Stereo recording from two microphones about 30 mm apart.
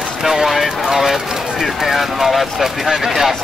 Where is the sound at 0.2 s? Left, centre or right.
Centre.